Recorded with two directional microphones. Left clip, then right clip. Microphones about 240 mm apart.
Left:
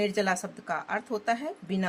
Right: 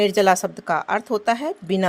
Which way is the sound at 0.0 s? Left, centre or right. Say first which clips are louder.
Right 11 dB; right.